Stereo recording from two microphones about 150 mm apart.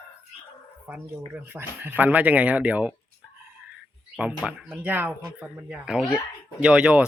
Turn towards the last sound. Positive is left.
turn(degrees=-5)  # may be behind; listen again after turning